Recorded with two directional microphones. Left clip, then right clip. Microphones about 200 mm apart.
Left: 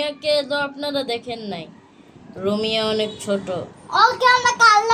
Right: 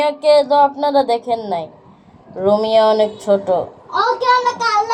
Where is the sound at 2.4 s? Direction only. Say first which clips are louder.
Right 9 dB; 5° left (ahead or behind).